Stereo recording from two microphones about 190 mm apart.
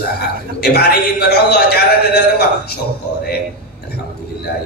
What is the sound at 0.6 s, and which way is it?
A man's voice, 55° left (ahead or behind).